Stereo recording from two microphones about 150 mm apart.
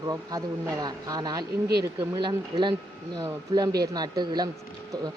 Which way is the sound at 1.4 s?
90° right.